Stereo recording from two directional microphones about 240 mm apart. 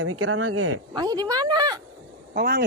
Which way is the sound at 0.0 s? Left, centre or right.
Right.